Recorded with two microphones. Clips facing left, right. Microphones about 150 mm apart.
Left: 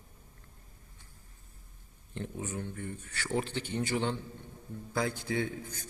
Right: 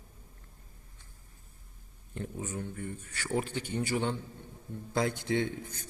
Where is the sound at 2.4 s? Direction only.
10° right (ahead or behind).